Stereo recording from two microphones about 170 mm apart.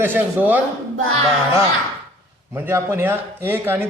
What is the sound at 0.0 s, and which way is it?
Speech, 10° right (ahead or behind).